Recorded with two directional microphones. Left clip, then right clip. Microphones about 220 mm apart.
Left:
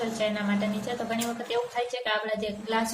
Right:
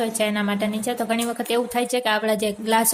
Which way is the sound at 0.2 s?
50° right (ahead or behind).